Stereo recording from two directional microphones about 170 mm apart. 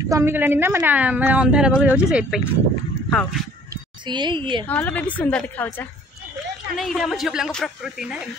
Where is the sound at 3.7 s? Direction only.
25° right (ahead or behind).